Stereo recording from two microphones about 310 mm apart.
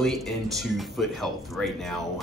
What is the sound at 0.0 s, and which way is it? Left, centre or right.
Speech, centre.